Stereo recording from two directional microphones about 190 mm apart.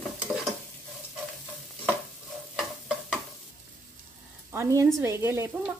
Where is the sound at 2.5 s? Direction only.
Centre (ahead or behind).